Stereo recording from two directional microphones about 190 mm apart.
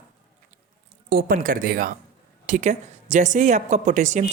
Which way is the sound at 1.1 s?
45° right (ahead or behind).